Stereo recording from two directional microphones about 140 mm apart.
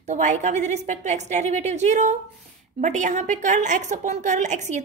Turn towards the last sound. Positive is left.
turn(degrees=-60)  # may be behind; listen again after turning